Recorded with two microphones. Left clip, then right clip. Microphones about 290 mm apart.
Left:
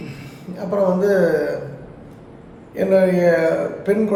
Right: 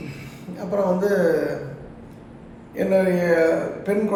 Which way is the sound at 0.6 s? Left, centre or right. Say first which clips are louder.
Left 3 dB; centre.